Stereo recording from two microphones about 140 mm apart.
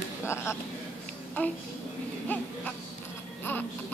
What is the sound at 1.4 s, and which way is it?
A child's voice, 15° left (ahead or behind).